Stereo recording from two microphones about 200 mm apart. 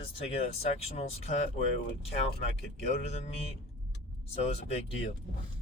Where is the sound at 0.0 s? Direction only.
30° left (ahead or behind).